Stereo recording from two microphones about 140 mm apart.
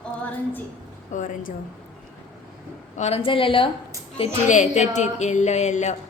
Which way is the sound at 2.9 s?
50° left (ahead or behind).